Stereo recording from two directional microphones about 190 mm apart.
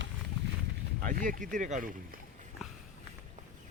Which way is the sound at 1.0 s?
45° right (ahead or behind).